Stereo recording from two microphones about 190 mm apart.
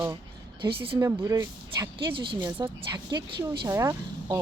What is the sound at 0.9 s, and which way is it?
Speech, 15° right (ahead or behind).